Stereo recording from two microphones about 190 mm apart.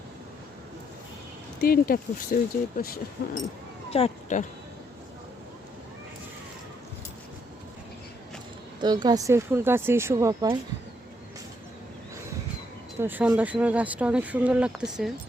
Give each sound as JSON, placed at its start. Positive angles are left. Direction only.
{"t": 1.6, "sound": "speech", "side_deg": 50}
{"t": 3.9, "sound": "speech", "side_deg": 35}
{"t": 8.8, "sound": "speech", "side_deg": -20}
{"t": 13.0, "sound": "speech", "side_deg": -10}